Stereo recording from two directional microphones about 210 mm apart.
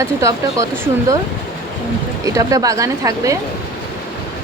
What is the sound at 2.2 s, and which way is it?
A woman's voice, 15° right (ahead or behind).